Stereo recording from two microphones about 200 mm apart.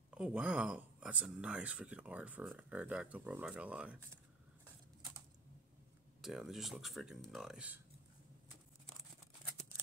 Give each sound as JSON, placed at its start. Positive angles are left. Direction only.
{"t": 0.1, "sound": "speech", "side_deg": -5}
{"t": 6.2, "sound": "speech", "side_deg": 0}